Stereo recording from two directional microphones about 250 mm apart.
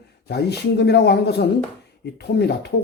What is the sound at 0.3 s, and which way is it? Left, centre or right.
Speech, left.